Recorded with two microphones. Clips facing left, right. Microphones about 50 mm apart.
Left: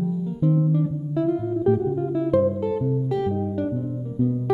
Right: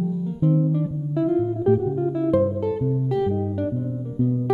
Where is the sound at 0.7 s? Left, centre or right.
Centre.